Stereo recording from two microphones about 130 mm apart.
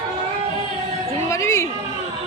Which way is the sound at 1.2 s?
20° left (ahead or behind).